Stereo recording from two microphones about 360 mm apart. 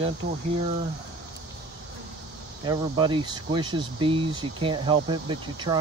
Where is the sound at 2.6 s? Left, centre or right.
Centre.